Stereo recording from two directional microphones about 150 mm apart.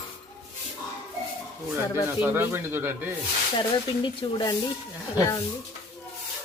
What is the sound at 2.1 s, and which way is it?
Speech, 15° right (ahead or behind).